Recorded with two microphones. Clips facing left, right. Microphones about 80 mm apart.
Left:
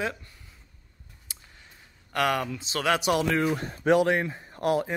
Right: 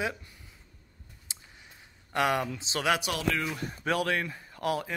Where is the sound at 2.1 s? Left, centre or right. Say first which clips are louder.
Left 1 dB; centre.